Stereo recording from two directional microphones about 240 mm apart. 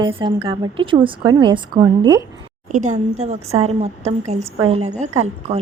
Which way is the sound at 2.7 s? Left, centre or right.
Right.